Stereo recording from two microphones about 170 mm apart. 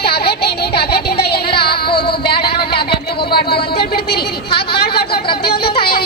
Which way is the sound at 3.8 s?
70° left (ahead or behind).